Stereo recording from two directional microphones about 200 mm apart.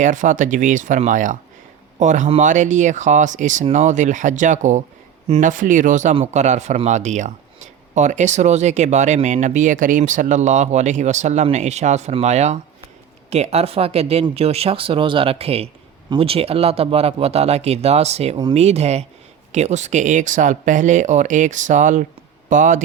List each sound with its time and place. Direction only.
0.0 s speech: 40° right (ahead or behind)